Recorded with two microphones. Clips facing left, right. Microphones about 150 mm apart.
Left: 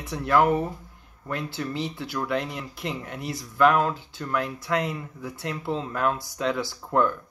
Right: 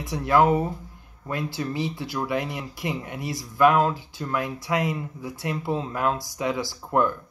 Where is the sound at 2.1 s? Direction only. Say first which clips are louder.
Even; 15° right (ahead or behind).